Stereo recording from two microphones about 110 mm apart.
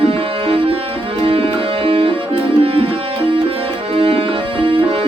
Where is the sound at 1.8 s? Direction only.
60° right (ahead or behind).